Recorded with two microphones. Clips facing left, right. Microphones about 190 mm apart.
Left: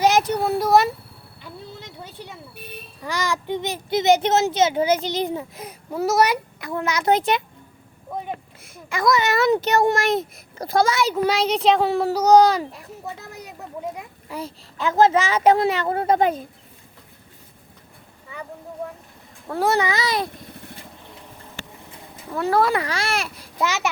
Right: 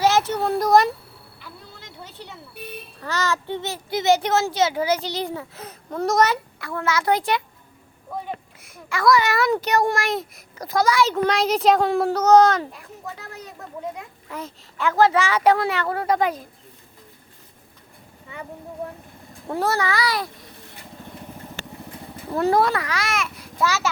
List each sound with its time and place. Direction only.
0.0 s a sound: 15° left (ahead or behind)
2.0 s a child's voice: 10° left (ahead or behind)
8.6 s a child's voice: 20° left (ahead or behind)
11.0 s speech: 10° left (ahead or behind)
14.8 s a child's voice: 20° left (ahead or behind)
19.6 s a child's voice: 20° left (ahead or behind)
22.1 s vehicle: 30° right (ahead or behind)
22.7 s speech: 30° left (ahead or behind)
23.6 s a child's voice: 20° left (ahead or behind)